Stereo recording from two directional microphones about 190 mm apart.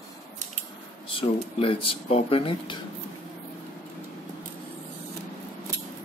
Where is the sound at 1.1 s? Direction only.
30° left (ahead or behind).